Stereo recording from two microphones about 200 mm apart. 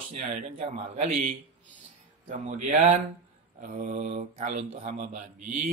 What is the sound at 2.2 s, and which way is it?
Speech, 40° right (ahead or behind).